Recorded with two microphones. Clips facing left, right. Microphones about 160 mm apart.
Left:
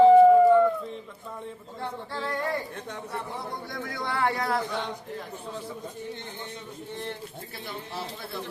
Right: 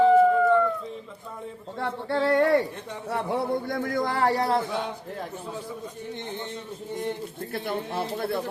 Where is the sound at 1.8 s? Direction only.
65° right (ahead or behind).